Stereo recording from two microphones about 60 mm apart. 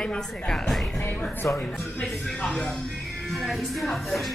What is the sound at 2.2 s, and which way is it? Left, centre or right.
A woman's voice, centre.